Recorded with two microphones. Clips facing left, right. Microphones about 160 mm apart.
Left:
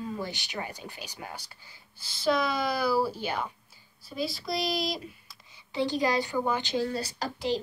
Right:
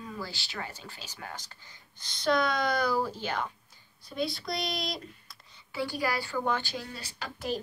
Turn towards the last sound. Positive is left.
turn(degrees=35)  # may be behind; listen again after turning